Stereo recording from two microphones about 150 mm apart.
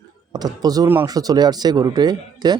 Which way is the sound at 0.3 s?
25° right (ahead or behind).